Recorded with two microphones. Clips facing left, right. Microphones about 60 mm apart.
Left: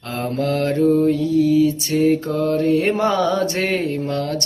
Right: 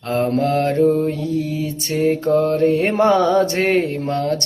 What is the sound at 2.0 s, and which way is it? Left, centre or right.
Mantra, centre.